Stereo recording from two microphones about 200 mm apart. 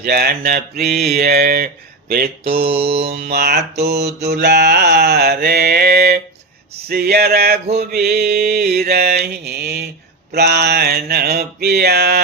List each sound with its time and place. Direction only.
0.0 s mantra: 50° right (ahead or behind)
2.6 s mantra: 30° right (ahead or behind)
3.1 s mantra: 50° right (ahead or behind)